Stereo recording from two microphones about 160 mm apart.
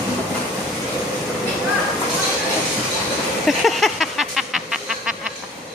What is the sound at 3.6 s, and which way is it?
Music, centre (ahead or behind).